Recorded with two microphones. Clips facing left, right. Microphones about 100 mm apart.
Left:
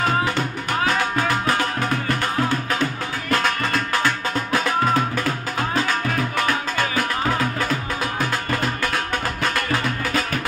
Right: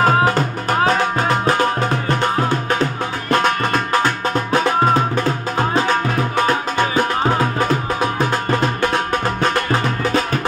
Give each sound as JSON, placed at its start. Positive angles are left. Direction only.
{"t": 0.0, "sound": "music", "side_deg": -45}
{"t": 3.3, "sound": "music", "side_deg": -25}